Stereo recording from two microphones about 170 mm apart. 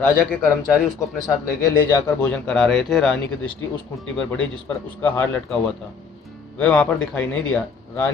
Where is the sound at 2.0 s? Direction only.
5° left (ahead or behind).